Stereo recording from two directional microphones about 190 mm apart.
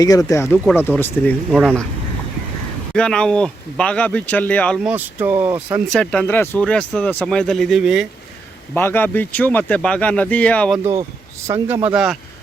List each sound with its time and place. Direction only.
0.0 s speech: 20° left (ahead or behind); by 1.8 s centre (ahead or behind)
2.9 s speech: 5° left (ahead or behind)
4.9 s speech: 10° right (ahead or behind)
5.9 s speech: 5° left (ahead or behind)
8.7 s speech: 10° left (ahead or behind)
11.4 s speech: 10° right (ahead or behind)